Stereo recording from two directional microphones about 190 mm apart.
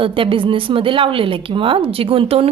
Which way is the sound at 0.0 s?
30° right (ahead or behind).